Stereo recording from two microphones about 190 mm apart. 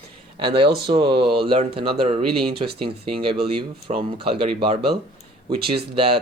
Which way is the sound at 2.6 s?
55° right (ahead or behind).